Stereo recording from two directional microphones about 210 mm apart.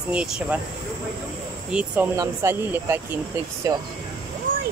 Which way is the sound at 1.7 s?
5° right (ahead or behind).